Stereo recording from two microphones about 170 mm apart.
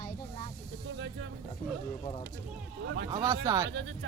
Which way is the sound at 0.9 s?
90° right.